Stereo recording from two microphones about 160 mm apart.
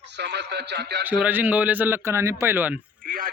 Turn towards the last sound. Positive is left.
turn(degrees=-60)  # may be behind; listen again after turning